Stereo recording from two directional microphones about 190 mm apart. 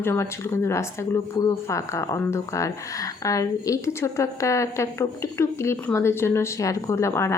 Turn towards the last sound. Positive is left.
turn(degrees=15)  # may be behind; listen again after turning